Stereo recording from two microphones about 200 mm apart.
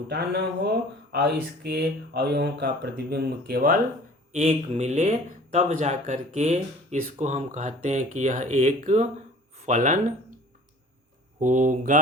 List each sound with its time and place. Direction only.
0.1 s speech: 55° right (ahead or behind)
4.3 s speech: 35° right (ahead or behind)
11.3 s speech: 40° right (ahead or behind)